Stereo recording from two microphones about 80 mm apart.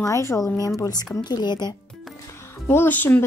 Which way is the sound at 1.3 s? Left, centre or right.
Left.